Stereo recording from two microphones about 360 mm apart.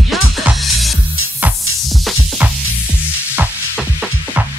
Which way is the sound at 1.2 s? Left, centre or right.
Left.